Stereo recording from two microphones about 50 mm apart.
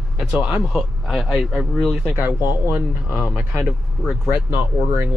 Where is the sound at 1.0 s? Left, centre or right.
Centre.